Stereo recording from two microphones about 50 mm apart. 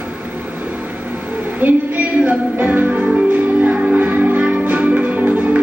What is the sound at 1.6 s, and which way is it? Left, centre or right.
Music, right.